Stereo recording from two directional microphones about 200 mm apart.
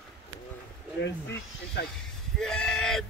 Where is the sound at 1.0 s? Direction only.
55° left (ahead or behind).